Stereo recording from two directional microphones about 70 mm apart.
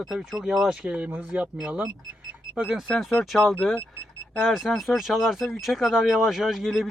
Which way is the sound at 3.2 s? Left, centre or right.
Centre.